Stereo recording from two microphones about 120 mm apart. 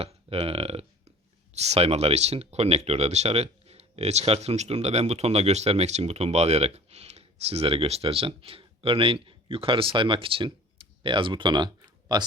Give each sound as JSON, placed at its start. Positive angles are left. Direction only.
{"t": 0.0, "sound": "speech", "side_deg": -55}